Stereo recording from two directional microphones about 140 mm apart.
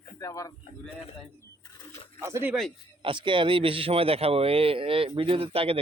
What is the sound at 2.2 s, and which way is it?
Speech, 15° right (ahead or behind).